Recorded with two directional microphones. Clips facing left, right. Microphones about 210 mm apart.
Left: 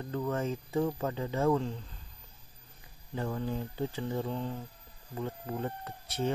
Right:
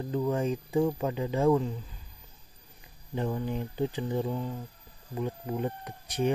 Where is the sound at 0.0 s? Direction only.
15° right (ahead or behind).